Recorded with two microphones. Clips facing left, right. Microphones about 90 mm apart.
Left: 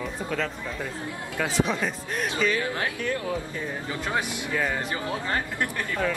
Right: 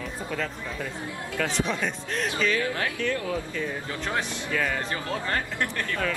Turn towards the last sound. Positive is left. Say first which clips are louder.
# left 1 dB
turn(degrees=15)  # may be behind; listen again after turning